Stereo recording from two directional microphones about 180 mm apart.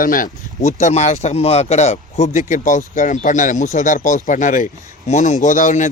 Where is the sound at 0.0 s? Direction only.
50° left (ahead or behind).